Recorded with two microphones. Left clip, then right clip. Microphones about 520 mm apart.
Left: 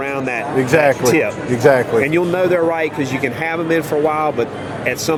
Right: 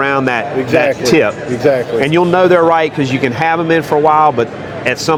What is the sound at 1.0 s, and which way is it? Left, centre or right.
Speech, right.